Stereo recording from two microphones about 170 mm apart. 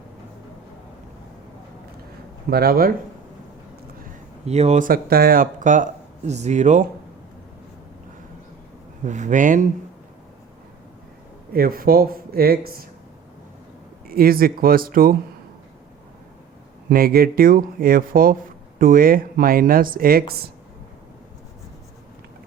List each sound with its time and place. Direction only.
2.5 s speech: 65° right (ahead or behind)
4.4 s speech: 40° right (ahead or behind)
4.9 s speech: 60° right (ahead or behind); by 6.8 s 45° right (ahead or behind)
9.0 s speech: 45° right (ahead or behind)
11.5 s speech: 60° right (ahead or behind)
14.1 s speech: 60° right (ahead or behind)
16.9 s speech: 60° right (ahead or behind)